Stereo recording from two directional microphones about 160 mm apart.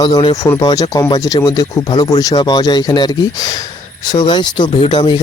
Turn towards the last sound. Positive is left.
turn(degrees=30)  # may be behind; listen again after turning